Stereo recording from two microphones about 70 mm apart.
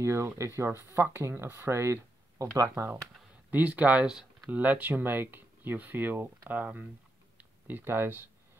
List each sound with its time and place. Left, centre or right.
0.0 s speech: right
2.3 s speech: right
3.4 s speech: right
4.0 s speech: centre
4.5 s speech: right